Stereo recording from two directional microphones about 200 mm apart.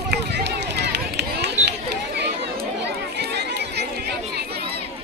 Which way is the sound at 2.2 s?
55° right (ahead or behind).